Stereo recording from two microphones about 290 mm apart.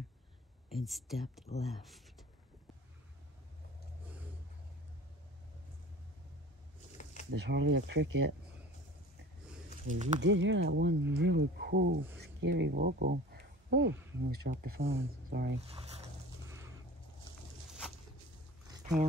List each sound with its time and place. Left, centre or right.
0.7 s speech: centre
7.2 s speech: right
9.8 s speech: right
10.2 s speech: right